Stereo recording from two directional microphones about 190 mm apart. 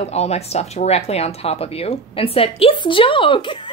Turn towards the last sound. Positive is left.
turn(degrees=25)  # may be behind; listen again after turning